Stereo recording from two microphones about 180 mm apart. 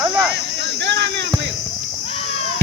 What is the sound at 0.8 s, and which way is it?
Speech, 75° right (ahead or behind).